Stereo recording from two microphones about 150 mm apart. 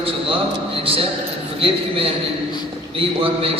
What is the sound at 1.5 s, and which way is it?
A man's voice, 40° right (ahead or behind).